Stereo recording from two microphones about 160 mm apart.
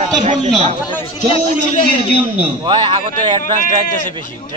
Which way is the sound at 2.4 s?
35° right (ahead or behind).